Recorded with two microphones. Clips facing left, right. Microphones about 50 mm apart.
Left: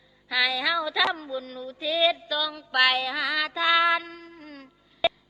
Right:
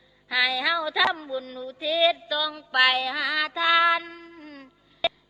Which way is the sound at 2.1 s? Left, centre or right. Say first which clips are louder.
Right 1 dB; centre.